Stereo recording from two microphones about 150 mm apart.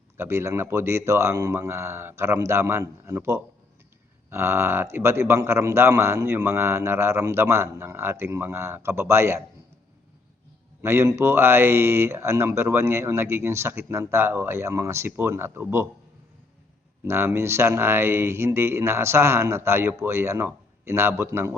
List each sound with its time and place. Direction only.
0.2 s speech: 15° right (ahead or behind)
10.8 s speech: 15° right (ahead or behind)
17.1 s speech: 15° right (ahead or behind)